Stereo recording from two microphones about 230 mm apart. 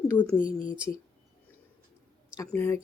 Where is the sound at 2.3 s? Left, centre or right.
Centre.